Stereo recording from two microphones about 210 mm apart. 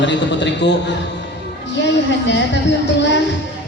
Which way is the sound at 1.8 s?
55° left (ahead or behind).